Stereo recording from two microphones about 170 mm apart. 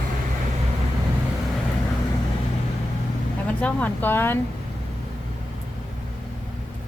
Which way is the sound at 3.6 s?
10° left (ahead or behind).